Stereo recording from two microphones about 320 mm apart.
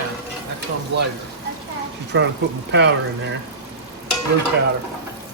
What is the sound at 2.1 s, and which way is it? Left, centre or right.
Speech, right.